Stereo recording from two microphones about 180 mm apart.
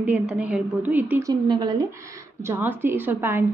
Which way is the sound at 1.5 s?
25° right (ahead or behind).